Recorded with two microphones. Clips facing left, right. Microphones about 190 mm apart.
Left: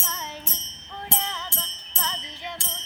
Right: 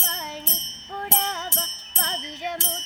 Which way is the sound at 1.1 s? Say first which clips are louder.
Right 3 dB; 45° right (ahead or behind).